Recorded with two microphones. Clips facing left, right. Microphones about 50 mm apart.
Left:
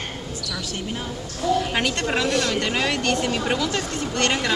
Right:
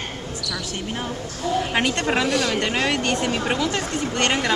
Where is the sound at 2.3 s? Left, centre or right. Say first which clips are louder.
Right 1 dB; centre.